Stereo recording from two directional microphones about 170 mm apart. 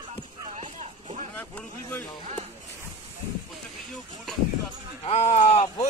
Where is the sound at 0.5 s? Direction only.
45° right (ahead or behind).